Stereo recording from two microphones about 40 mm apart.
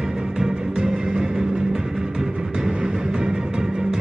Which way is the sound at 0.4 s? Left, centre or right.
Centre.